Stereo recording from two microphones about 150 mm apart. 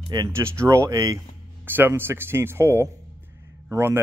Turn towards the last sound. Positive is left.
turn(degrees=-15)  # may be behind; listen again after turning